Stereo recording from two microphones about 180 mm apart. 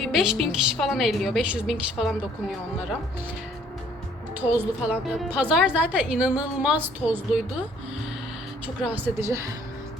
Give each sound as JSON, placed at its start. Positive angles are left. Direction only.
{"t": 0.0, "sound": "a woman's voice", "side_deg": 0}
{"t": 4.4, "sound": "a woman's voice", "side_deg": -10}
{"t": 8.6, "sound": "a woman's voice", "side_deg": -10}